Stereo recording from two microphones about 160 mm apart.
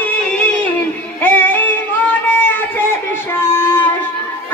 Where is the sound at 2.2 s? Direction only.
10° left (ahead or behind).